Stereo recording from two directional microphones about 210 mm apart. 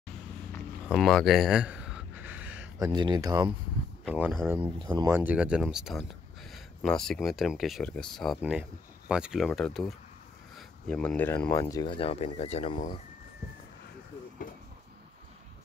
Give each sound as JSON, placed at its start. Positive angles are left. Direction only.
{"t": 0.8, "sound": "a sound", "side_deg": 0}
{"t": 2.9, "sound": "speech", "side_deg": -20}
{"t": 4.0, "sound": "speech", "side_deg": -5}
{"t": 4.6, "sound": "speech", "side_deg": -25}
{"t": 5.1, "sound": "speech", "side_deg": -10}